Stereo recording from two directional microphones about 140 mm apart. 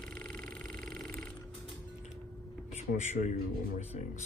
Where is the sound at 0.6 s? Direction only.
90° right.